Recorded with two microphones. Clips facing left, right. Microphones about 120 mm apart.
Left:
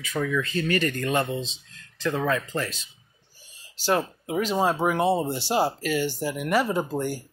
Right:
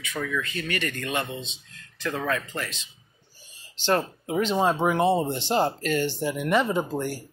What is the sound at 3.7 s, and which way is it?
Speech, 10° left (ahead or behind).